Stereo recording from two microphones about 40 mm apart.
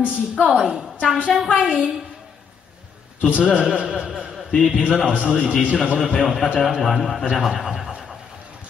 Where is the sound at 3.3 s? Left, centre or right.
Right.